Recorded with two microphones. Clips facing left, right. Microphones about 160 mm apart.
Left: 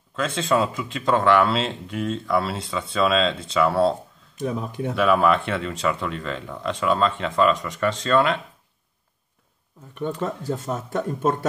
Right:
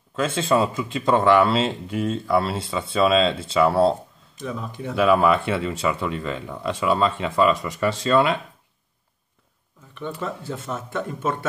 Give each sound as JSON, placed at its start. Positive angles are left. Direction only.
{"t": 0.1, "sound": "speech", "side_deg": -5}
{"t": 4.4, "sound": "speech", "side_deg": 50}
{"t": 4.9, "sound": "speech", "side_deg": 0}
{"t": 10.2, "sound": "speech", "side_deg": 40}